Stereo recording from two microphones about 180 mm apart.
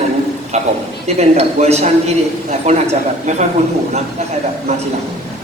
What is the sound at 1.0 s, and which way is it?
A man's voice, 35° right (ahead or behind).